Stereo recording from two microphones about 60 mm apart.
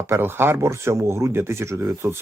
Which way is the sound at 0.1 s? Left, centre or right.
Right.